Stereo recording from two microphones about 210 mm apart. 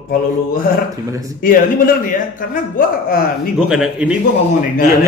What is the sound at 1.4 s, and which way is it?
A man's voice, 40° left (ahead or behind).